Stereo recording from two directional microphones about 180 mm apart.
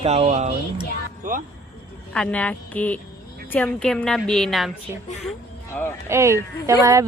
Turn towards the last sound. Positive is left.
turn(degrees=-15)  # may be behind; listen again after turning